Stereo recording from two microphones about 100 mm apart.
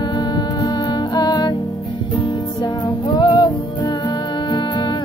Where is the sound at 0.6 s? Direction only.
50° left (ahead or behind).